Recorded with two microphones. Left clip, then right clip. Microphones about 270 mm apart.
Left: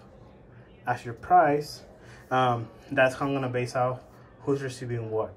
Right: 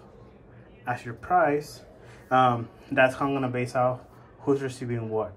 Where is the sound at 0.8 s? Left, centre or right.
Centre.